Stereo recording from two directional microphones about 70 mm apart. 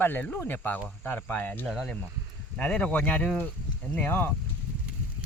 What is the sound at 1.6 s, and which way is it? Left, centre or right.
Speech, centre.